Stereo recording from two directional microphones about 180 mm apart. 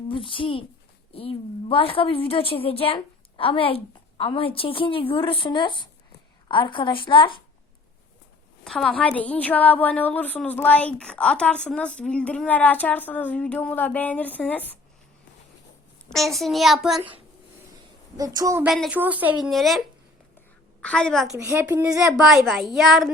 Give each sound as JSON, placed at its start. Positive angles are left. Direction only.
{"t": 0.1, "sound": "a woman's voice", "side_deg": 30}
{"t": 8.6, "sound": "a woman's voice", "side_deg": 0}
{"t": 16.0, "sound": "a child's voice", "side_deg": 0}
{"t": 18.2, "sound": "a woman's voice", "side_deg": -20}
{"t": 18.6, "sound": "a child's voice", "side_deg": -5}
{"t": 20.8, "sound": "a child's voice", "side_deg": 5}
{"t": 21.3, "sound": "a woman's voice", "side_deg": -15}
{"t": 22.1, "sound": "a child's voice", "side_deg": 0}